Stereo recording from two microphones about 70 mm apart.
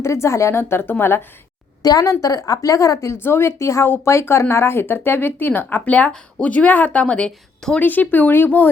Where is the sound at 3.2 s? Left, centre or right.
Left; by 7.8 s centre.